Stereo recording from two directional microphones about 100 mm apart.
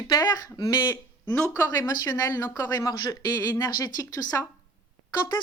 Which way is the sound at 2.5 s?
25° left (ahead or behind).